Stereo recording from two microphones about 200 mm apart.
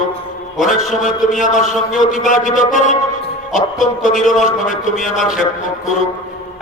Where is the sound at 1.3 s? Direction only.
40° left (ahead or behind).